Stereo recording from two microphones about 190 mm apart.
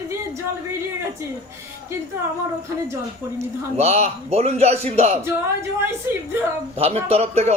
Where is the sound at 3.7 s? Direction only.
35° right (ahead or behind).